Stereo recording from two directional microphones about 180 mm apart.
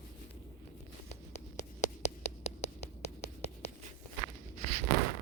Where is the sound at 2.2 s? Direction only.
40° left (ahead or behind).